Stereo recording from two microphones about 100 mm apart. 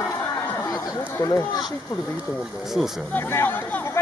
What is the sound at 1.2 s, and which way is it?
Speech, 40° left (ahead or behind).